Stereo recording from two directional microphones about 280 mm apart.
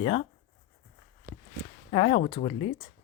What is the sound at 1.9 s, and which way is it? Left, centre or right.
Speech, left.